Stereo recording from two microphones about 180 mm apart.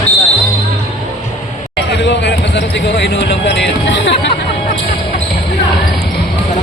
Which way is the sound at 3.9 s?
80° left.